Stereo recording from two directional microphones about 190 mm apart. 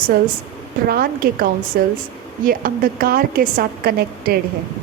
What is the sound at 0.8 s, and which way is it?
A woman's voice, 55° right (ahead or behind).